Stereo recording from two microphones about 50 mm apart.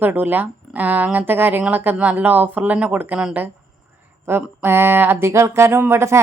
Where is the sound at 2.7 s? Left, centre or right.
Right.